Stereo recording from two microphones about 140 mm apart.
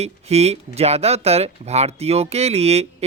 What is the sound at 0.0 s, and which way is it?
Speech, 50° right (ahead or behind).